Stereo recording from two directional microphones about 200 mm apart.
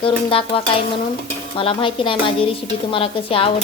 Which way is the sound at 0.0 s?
25° left (ahead or behind).